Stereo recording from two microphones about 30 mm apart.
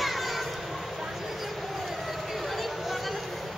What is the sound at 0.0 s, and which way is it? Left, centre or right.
Children playing, centre.